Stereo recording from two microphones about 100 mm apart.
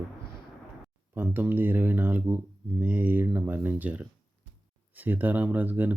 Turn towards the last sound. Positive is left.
turn(degrees=-15)  # may be behind; listen again after turning